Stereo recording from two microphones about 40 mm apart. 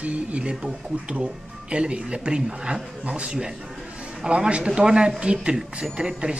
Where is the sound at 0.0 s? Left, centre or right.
Right.